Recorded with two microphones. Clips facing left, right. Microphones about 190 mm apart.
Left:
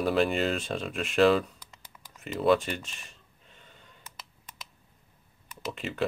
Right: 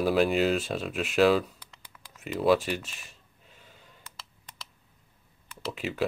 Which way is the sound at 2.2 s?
Centre (ahead or behind).